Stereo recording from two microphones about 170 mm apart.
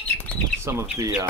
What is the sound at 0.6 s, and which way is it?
Speech, 15° right (ahead or behind).